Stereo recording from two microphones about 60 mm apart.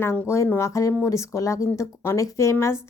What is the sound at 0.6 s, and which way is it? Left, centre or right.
A woman's voice, left.